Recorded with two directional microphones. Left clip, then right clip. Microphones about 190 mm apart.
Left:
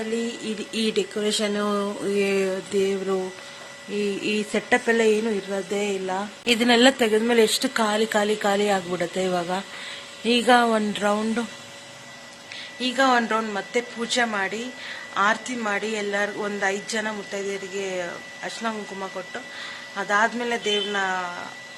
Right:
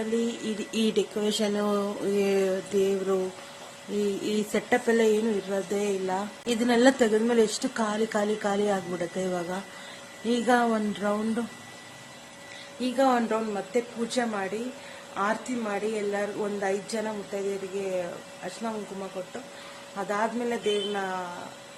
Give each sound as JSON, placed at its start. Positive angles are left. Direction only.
{"t": 0.4, "sound": "a woman's voice", "side_deg": 5}
{"t": 4.2, "sound": "a woman's voice", "side_deg": 10}
{"t": 12.8, "sound": "a woman's voice", "side_deg": -5}
{"t": 20.0, "sound": "a woman's voice", "side_deg": 0}